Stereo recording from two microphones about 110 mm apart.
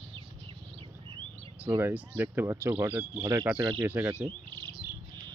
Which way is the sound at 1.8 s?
15° right (ahead or behind).